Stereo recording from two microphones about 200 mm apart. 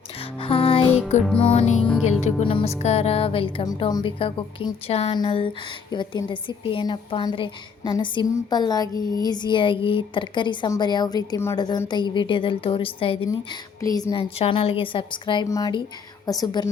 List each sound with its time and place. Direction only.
0.3 s music: 25° left (ahead or behind)
1.2 s music: 5° left (ahead or behind)
1.5 s music: 35° left (ahead or behind)
2.2 s a woman's voice: 25° left (ahead or behind)